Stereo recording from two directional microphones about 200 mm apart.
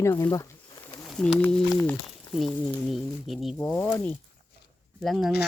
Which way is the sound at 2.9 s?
Centre (ahead or behind).